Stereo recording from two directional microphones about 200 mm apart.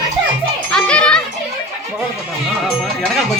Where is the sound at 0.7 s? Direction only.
5° left (ahead or behind).